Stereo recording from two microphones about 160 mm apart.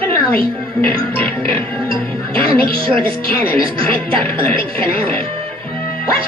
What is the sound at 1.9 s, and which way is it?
Speech, 35° right (ahead or behind).